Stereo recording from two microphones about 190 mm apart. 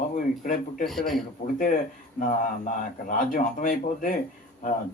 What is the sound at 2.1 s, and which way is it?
Speech, 45° left (ahead or behind).